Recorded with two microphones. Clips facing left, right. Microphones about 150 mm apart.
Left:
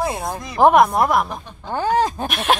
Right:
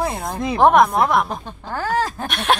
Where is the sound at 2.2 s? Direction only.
Centre (ahead or behind).